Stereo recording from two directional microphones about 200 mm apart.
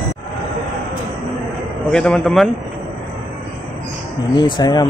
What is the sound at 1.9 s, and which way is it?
Speech, 5° left (ahead or behind).